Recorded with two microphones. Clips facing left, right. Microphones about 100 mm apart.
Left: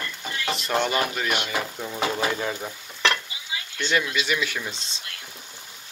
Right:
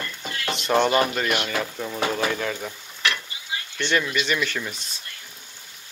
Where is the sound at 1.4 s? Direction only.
10° left (ahead or behind).